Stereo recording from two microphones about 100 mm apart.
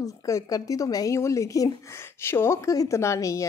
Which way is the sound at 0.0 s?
35° left (ahead or behind).